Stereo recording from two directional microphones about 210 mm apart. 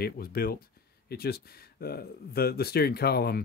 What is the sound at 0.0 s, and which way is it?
Speech, 45° left (ahead or behind).